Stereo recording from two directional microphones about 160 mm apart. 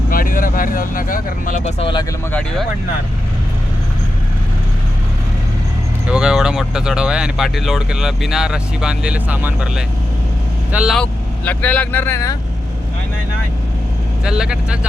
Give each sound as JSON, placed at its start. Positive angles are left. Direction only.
{"t": 0.1, "sound": "speech", "side_deg": 60}
{"t": 1.8, "sound": "speech", "side_deg": 30}
{"t": 6.1, "sound": "speech", "side_deg": -5}
{"t": 10.9, "sound": "speech", "side_deg": 10}
{"t": 14.3, "sound": "speech", "side_deg": -5}